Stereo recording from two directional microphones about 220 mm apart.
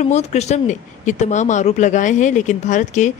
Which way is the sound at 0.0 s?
30° left (ahead or behind).